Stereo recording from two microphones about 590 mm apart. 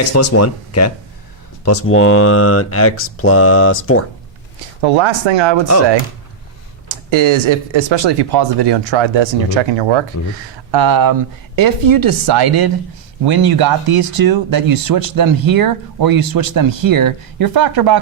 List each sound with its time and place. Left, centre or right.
0.1 s speech: left
4.8 s speech: right
6.8 s speech: right
10.7 s speech: right